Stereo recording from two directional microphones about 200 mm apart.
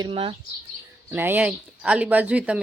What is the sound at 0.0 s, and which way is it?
Speech, 25° right (ahead or behind).